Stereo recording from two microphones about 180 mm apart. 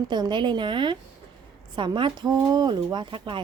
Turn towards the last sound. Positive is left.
turn(degrees=-25)  # may be behind; listen again after turning